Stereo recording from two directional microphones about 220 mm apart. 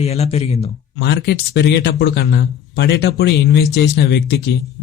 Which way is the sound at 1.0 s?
50° left (ahead or behind).